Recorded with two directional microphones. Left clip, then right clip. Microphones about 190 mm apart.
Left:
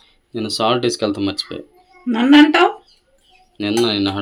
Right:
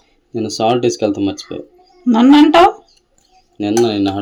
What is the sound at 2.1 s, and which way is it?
Speech, 40° right (ahead or behind).